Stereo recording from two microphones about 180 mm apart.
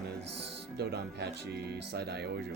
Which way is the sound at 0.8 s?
65° right (ahead or behind).